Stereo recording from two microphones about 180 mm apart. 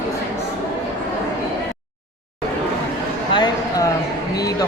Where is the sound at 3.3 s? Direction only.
25° left (ahead or behind).